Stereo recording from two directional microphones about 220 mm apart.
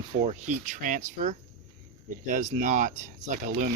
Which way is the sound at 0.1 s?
30° right (ahead or behind).